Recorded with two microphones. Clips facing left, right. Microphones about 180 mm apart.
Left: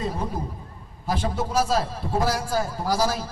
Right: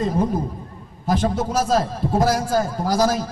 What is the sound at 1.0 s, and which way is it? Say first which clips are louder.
A man's voice: right 6 dB; 45° right (ahead or behind).